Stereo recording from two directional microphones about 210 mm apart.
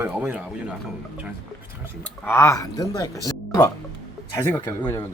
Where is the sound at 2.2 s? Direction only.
10° left (ahead or behind).